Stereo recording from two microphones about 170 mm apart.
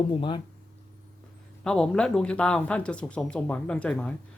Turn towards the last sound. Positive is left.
turn(degrees=5)  # may be behind; listen again after turning